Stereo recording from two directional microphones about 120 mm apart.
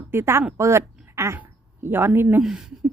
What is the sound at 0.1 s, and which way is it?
A woman's voice, 20° right (ahead or behind).